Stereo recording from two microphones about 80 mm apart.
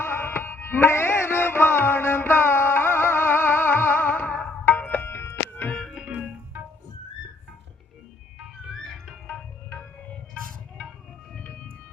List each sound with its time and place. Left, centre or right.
0.0 s music: left
5.8 s organ: centre